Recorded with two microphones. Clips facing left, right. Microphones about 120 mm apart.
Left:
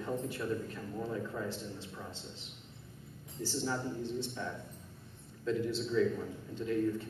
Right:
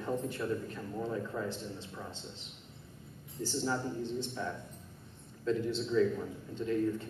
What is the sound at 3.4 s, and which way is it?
A man's voice, centre (ahead or behind).